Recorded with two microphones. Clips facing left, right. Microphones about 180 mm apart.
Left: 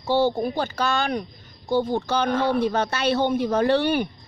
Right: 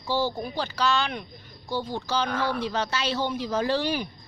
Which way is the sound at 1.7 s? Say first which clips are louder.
Left 6 dB; 55° left (ahead or behind).